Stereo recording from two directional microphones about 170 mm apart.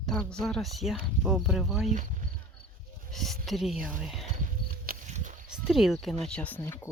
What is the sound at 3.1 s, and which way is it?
A woman's voice, centre (ahead or behind).